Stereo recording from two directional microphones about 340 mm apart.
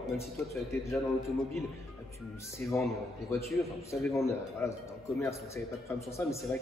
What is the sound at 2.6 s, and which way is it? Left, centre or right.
Speech, centre.